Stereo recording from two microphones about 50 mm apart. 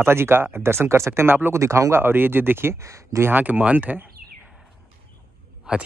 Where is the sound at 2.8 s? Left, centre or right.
Right.